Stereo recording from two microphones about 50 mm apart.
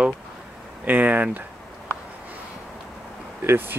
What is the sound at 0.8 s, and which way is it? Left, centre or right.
Speech, right.